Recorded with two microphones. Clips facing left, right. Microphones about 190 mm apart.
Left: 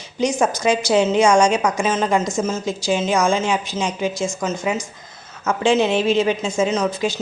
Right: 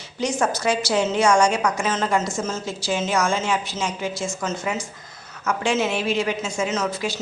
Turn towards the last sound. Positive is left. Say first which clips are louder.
# left 4 dB
turn(degrees=20)  # may be behind; listen again after turning